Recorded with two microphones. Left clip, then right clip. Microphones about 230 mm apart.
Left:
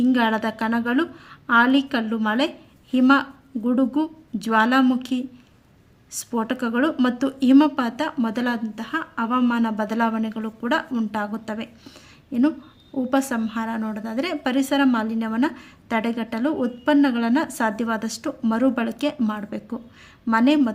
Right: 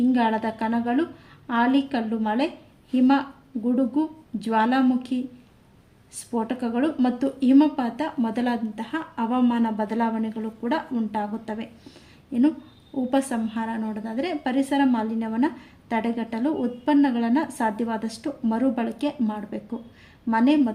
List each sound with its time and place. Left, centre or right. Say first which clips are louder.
0.0 s a woman's voice: left 2 dB; left